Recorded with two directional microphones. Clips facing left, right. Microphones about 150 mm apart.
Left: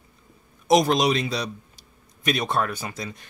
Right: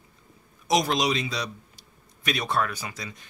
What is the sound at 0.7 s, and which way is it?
Speech, 55° left (ahead or behind).